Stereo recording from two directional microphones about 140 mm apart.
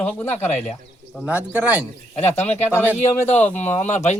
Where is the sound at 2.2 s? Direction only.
50° left (ahead or behind).